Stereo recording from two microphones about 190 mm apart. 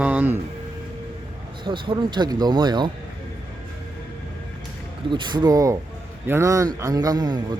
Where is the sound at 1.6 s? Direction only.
25° right (ahead or behind).